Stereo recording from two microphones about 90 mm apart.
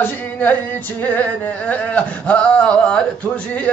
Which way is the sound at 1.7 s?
15° left (ahead or behind).